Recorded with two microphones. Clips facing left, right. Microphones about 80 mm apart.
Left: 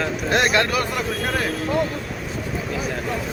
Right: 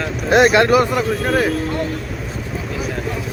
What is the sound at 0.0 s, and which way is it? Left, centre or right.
Speech, centre.